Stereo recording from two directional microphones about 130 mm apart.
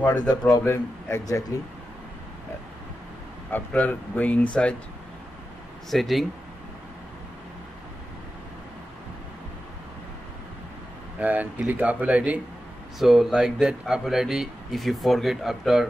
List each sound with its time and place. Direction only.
0.3 s a man's voice: 30° left (ahead or behind)
3.5 s speech: 15° left (ahead or behind)
5.9 s speech: centre (ahead or behind)
11.1 s speech: 10° right (ahead or behind)